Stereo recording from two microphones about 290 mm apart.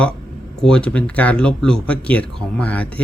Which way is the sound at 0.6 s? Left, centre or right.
Centre.